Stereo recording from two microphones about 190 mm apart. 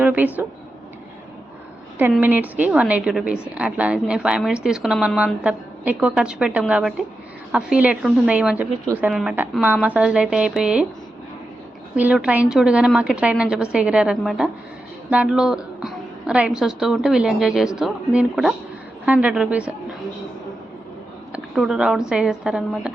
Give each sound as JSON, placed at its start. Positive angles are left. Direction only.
{"t": 0.0, "sound": "a sound", "side_deg": -10}
{"t": 2.0, "sound": "a woman's voice", "side_deg": -10}
{"t": 11.9, "sound": "a woman's voice", "side_deg": -5}
{"t": 21.3, "sound": "a woman's voice", "side_deg": 0}